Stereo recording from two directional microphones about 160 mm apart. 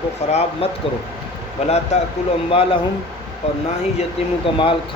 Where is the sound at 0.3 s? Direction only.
40° left (ahead or behind).